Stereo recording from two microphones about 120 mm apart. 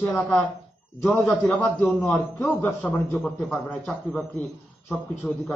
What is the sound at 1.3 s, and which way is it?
A man's voice, 15° left (ahead or behind).